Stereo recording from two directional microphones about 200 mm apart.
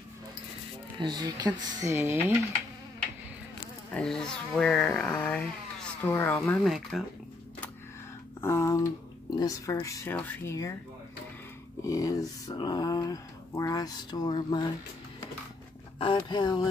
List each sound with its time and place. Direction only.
0.9 s speech: 20° right (ahead or behind)
3.9 s speech: 5° left (ahead or behind)
8.4 s speech: 15° left (ahead or behind)
11.8 s speech: 15° left (ahead or behind)
16.2 s speech: 20° left (ahead or behind)